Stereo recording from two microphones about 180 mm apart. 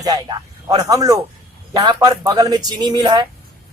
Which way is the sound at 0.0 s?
20° right (ahead or behind).